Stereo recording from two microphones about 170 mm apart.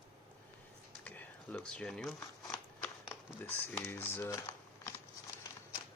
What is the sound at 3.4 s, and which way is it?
Speech, 15° left (ahead or behind).